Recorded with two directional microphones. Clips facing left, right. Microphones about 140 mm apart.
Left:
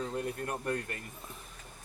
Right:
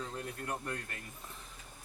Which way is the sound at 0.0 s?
50° left (ahead or behind).